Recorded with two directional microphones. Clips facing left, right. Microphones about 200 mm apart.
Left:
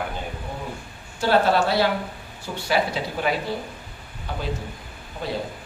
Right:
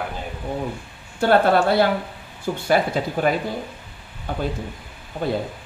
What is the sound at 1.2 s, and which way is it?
Speech, 55° right (ahead or behind).